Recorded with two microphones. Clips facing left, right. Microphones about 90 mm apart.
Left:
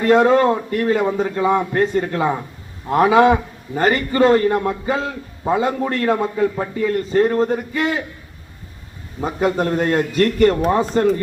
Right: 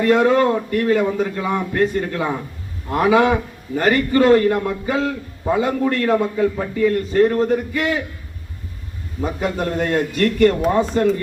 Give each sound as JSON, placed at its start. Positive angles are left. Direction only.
{"t": 0.0, "sound": "a man's voice", "side_deg": 35}
{"t": 9.2, "sound": "a man's voice", "side_deg": 35}